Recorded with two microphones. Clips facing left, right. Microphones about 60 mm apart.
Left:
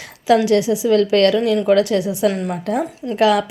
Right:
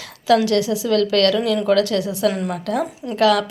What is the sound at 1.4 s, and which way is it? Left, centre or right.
Speech, centre.